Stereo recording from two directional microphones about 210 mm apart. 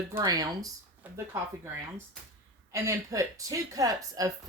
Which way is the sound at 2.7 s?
15° right (ahead or behind).